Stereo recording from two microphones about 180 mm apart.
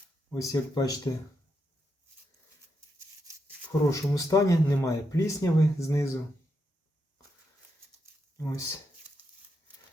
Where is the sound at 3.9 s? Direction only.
15° left (ahead or behind).